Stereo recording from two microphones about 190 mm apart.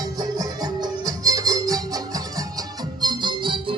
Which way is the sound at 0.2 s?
20° right (ahead or behind).